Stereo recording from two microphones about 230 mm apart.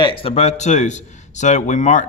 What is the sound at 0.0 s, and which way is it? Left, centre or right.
A man's voice, left.